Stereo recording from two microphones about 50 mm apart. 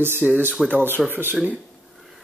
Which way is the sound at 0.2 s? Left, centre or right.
Centre.